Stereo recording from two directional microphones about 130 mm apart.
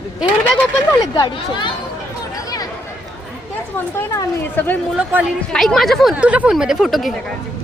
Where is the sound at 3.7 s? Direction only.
15° left (ahead or behind).